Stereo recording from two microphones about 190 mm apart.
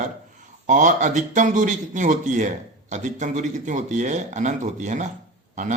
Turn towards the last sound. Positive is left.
turn(degrees=-40)  # may be behind; listen again after turning